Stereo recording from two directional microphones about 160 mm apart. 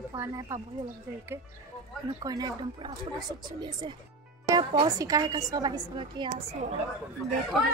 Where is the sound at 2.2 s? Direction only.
25° right (ahead or behind).